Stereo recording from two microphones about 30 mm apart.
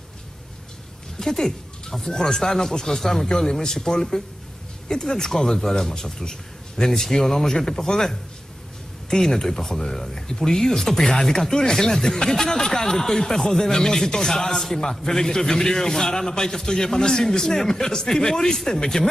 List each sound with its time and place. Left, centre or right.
1.2 s speech: centre
2.0 s speech: left
2.4 s a man's voice: centre